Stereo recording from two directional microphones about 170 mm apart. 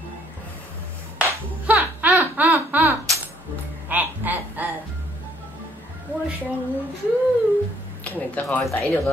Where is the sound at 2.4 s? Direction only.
10° right (ahead or behind).